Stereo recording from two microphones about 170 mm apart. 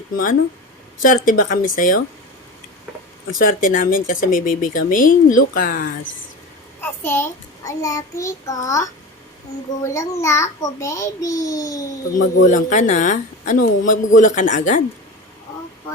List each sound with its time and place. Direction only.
1.0 s speech: 55° left (ahead or behind)
3.3 s speech: 50° left (ahead or behind)
6.8 s child singing: 15° left (ahead or behind)
9.8 s a child's voice: 20° left (ahead or behind)
12.0 s speech: 90° left
12.5 s speech: 45° left (ahead or behind)